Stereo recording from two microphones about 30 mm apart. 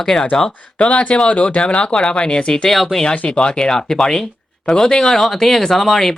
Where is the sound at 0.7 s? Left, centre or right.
Left.